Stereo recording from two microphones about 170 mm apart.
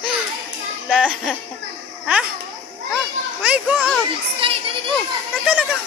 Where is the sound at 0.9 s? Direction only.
5° right (ahead or behind).